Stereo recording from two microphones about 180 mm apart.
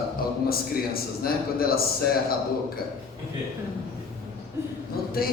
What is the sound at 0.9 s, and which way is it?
Speech, 55° left (ahead or behind).